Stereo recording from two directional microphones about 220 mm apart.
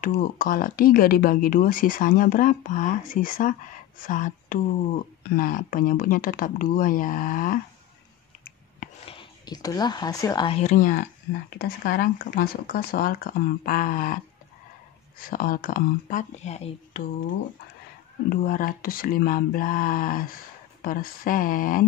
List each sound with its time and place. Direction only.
0.0 s speech: 40° left (ahead or behind)
9.0 s speech: 20° left (ahead or behind)
10.7 s speech: 40° left (ahead or behind)
18.3 s speech: 40° left (ahead or behind)